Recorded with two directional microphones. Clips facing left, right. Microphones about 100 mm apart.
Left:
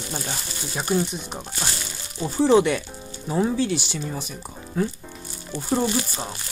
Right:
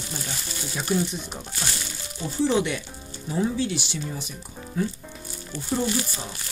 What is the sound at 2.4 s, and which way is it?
Sizzle, 50° left (ahead or behind).